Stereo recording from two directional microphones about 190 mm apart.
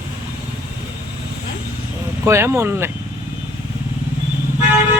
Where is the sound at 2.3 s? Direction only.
15° right (ahead or behind).